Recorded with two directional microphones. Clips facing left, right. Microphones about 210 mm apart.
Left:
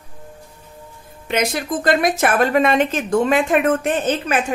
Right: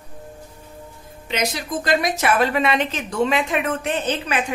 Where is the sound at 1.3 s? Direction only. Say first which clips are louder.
Left 4 dB; 55° left (ahead or behind).